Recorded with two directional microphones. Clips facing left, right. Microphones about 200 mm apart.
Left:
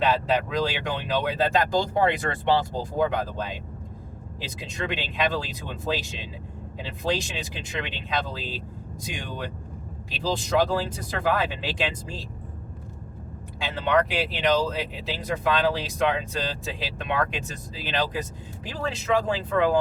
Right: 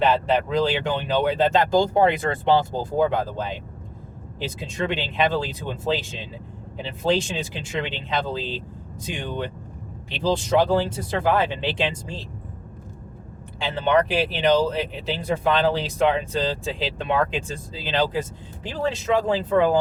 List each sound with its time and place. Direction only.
0.0 s speech: 25° right (ahead or behind)
4.6 s speech: 30° right (ahead or behind)
13.6 s speech: 30° right (ahead or behind)